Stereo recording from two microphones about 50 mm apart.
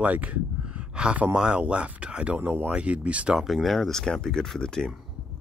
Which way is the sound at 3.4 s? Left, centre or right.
Centre.